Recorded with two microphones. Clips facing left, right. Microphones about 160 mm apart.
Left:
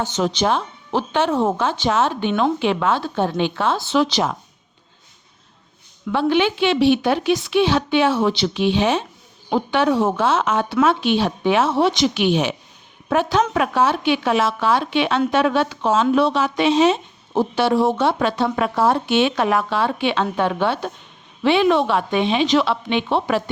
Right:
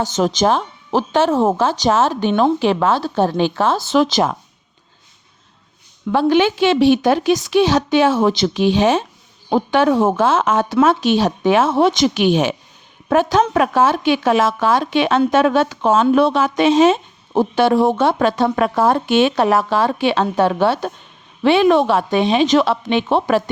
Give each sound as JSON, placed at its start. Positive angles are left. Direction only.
{"t": 0.0, "sound": "speech", "side_deg": -45}
{"t": 6.1, "sound": "a woman's voice", "side_deg": -40}